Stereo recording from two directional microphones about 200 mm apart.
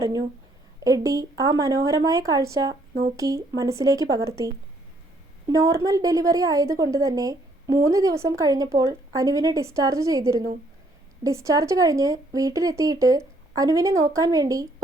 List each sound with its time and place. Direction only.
0.0 s a woman's voice: 20° right (ahead or behind)